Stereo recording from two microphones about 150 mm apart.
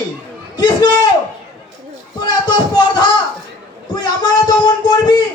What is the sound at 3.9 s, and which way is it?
Speech, 30° left (ahead or behind).